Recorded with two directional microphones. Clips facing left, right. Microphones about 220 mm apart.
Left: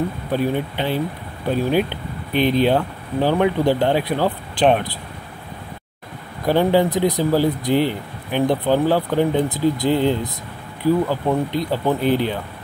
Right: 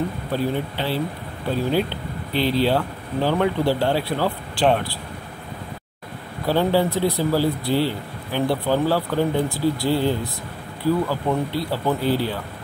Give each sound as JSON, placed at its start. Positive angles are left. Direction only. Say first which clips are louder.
{"t": 0.3, "sound": "speech", "louder": "left 4 dB", "side_deg": 15}
{"t": 6.4, "sound": "speech", "louder": "left 3 dB", "side_deg": 15}